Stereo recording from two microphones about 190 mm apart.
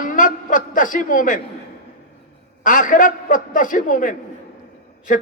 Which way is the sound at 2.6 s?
45° left (ahead or behind).